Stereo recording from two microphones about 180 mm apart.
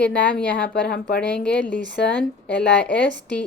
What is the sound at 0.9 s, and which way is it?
Speech, 60° left (ahead or behind).